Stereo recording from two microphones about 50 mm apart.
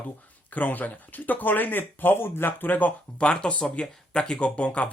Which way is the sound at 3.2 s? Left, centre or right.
Left.